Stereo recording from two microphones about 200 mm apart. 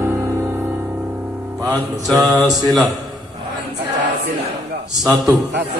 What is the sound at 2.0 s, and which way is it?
Mantra, centre (ahead or behind).